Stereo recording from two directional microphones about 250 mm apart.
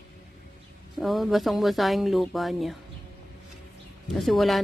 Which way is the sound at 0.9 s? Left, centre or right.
Centre.